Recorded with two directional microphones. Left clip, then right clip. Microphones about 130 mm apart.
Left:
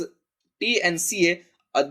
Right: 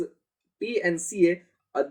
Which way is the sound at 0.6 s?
25° left (ahead or behind).